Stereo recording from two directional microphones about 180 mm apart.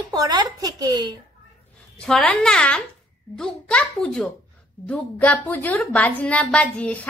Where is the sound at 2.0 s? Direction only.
5° left (ahead or behind).